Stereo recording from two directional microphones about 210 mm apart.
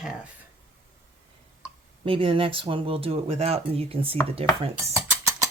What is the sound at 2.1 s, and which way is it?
Speech, 25° right (ahead or behind).